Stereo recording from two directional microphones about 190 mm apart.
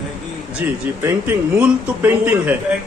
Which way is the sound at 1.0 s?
10° right (ahead or behind).